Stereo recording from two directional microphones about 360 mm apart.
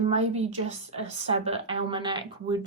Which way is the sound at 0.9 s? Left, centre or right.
Centre.